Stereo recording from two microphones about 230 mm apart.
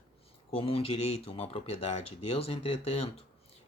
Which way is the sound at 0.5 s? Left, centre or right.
Left.